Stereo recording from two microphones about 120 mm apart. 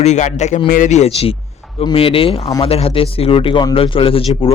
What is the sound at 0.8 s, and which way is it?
Speech, 70° left (ahead or behind).